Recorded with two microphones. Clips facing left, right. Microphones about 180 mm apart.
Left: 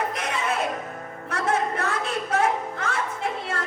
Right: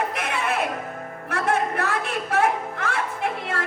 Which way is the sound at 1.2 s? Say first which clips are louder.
Right 1 dB; 60° right (ahead or behind).